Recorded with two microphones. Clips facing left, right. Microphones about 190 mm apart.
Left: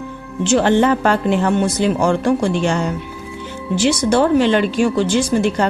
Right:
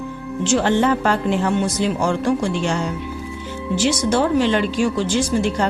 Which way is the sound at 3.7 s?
60° left (ahead or behind).